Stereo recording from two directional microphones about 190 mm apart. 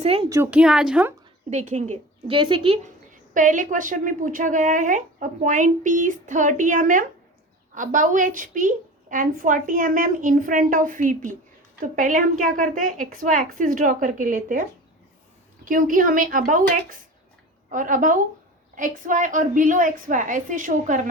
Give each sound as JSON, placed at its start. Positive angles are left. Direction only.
{"t": 0.0, "sound": "a woman's voice", "side_deg": -30}
{"t": 0.3, "sound": "a woman's voice", "side_deg": -15}
{"t": 0.6, "sound": "speech", "side_deg": -5}
{"t": 1.5, "sound": "a woman's voice", "side_deg": -40}
{"t": 3.3, "sound": "speech", "side_deg": -45}
{"t": 15.6, "sound": "speech", "side_deg": -45}